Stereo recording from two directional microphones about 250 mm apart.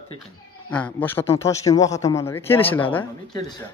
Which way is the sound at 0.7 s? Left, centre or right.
Centre.